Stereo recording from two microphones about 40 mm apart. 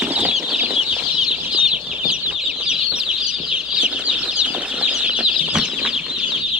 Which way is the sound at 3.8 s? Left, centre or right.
Right.